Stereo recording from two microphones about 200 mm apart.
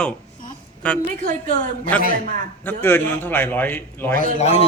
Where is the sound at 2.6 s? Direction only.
10° left (ahead or behind).